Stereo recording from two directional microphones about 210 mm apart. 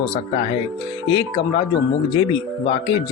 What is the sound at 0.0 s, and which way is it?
Speech, 25° left (ahead or behind).